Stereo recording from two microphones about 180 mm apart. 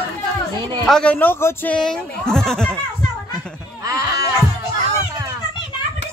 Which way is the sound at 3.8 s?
20° right (ahead or behind).